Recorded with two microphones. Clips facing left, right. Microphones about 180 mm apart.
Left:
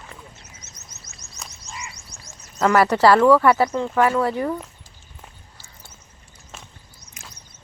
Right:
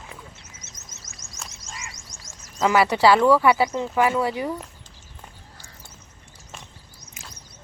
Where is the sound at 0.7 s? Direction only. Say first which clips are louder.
Even; 90° right.